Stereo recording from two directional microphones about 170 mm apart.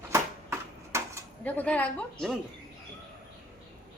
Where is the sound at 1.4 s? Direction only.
10° left (ahead or behind).